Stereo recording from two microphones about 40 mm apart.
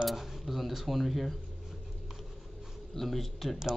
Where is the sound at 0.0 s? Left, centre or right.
Centre.